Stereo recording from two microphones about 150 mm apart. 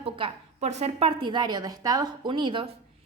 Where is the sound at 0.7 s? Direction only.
45° right (ahead or behind).